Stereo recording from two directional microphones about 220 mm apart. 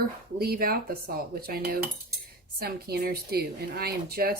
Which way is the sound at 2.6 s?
45° right (ahead or behind).